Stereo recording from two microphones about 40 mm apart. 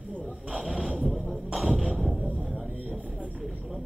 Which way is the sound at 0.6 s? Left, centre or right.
Centre.